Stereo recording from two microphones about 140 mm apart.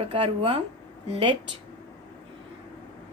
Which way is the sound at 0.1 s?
45° right (ahead or behind).